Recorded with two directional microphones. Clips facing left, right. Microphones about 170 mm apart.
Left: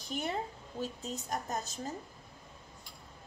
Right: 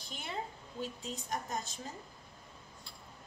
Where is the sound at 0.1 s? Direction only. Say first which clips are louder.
Left 6 dB; 45° left (ahead or behind).